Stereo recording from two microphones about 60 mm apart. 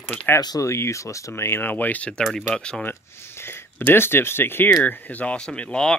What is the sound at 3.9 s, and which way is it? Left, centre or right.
Speech, left.